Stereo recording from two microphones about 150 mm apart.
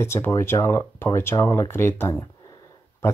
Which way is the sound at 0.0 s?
15° left (ahead or behind).